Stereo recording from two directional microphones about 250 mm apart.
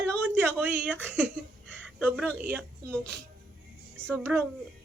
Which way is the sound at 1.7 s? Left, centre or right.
Centre.